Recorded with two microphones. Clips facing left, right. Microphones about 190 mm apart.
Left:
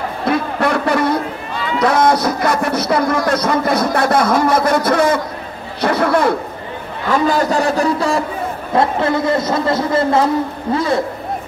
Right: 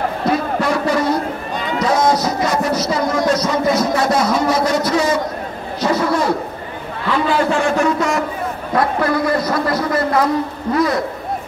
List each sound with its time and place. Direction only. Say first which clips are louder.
0.3 s music: left 2 dB; 60° left (ahead or behind)
1.8 s a sound: left 2 dB; 60° left (ahead or behind)
7.1 s a man's voice: left 2 dB; 45° left (ahead or behind); by 11.0 s 25° left (ahead or behind)